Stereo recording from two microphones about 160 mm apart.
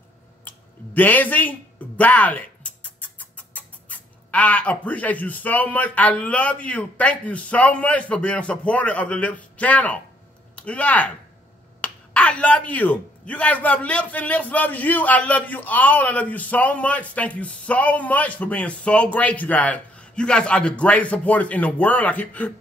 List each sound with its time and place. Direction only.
0.5 s speech: 10° left (ahead or behind)